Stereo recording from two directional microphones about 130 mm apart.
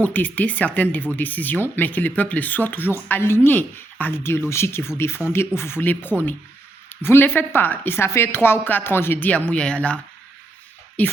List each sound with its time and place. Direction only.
0.0 s speech: 15° left (ahead or behind)